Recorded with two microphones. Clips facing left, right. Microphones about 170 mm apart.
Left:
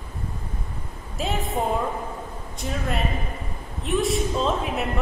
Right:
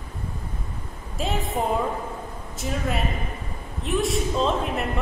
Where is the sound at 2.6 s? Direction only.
Centre (ahead or behind).